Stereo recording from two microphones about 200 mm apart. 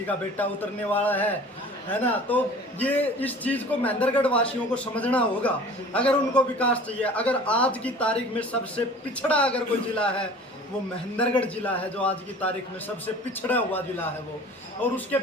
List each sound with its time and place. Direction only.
0.3 s a man's voice: 10° left (ahead or behind)
13.5 s a man's voice: 10° left (ahead or behind)